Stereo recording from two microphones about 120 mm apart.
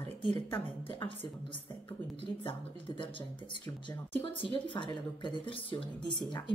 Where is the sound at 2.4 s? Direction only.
45° left (ahead or behind).